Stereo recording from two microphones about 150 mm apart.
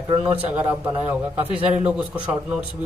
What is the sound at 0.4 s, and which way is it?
Speech, 10° right (ahead or behind).